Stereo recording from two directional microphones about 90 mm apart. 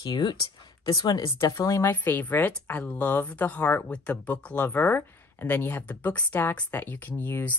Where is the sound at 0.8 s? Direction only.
45° left (ahead or behind).